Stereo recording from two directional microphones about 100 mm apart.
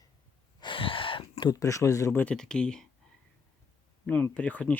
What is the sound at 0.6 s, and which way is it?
Gasp, 60° left (ahead or behind).